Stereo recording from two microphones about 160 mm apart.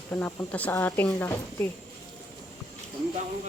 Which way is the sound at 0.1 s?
10° left (ahead or behind).